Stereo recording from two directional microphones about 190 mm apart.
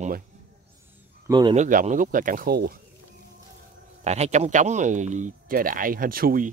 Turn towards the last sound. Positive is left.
turn(degrees=-50)  # may be behind; listen again after turning